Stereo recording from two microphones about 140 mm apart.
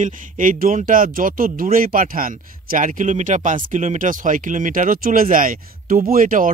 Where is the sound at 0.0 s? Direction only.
75° right (ahead or behind).